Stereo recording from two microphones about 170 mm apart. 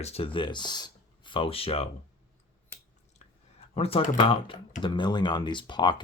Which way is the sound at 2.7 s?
15° left (ahead or behind).